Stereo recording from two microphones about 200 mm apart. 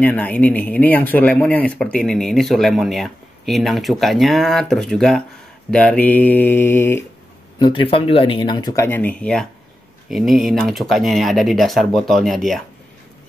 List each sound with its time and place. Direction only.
0.0 s speech: 5° left (ahead or behind)
7.5 s speech: 20° left (ahead or behind); by 12.6 s centre (ahead or behind)